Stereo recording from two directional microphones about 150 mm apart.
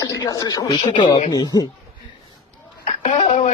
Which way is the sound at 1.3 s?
25° left (ahead or behind).